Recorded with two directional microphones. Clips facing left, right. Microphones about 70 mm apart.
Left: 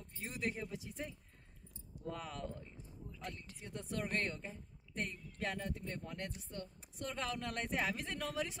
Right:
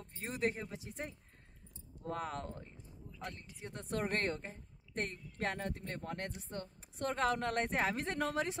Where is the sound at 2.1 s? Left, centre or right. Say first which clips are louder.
Right 5 dB; right.